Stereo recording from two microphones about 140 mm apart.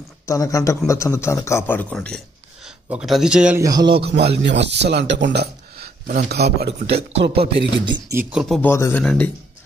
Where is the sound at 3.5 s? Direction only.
25° right (ahead or behind).